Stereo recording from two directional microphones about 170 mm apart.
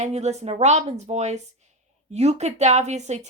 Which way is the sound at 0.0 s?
40° right (ahead or behind).